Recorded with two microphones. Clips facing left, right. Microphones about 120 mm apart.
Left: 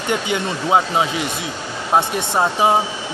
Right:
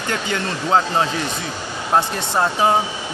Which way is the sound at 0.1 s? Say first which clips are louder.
Left 3 dB; 15° left (ahead or behind).